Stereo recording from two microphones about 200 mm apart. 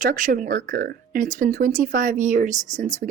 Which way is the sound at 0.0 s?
40° right (ahead or behind).